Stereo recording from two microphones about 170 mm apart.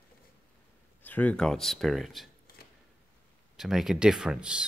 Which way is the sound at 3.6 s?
Centre (ahead or behind).